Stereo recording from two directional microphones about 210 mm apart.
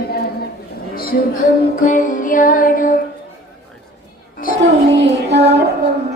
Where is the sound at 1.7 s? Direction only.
40° left (ahead or behind).